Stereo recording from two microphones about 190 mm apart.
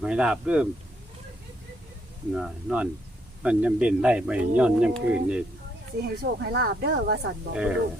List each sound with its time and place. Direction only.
0.0 s speech: 5° right (ahead or behind)
2.3 s speech: 5° right (ahead or behind)
6.0 s speech: 55° right (ahead or behind)
7.5 s speech: 5° right (ahead or behind)